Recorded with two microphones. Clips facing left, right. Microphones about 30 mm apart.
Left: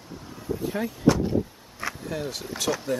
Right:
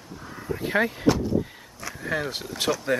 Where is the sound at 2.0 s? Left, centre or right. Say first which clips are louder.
Right 8 dB; right.